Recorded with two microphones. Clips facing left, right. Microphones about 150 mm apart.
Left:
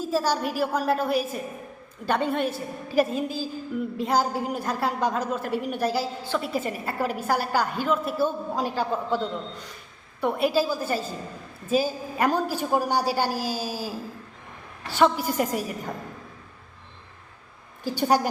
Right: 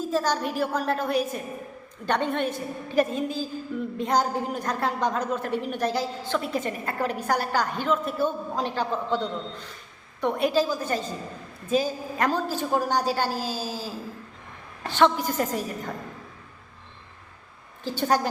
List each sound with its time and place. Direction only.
0.1 s a woman's voice: 10° left (ahead or behind)
17.8 s a woman's voice: 10° left (ahead or behind)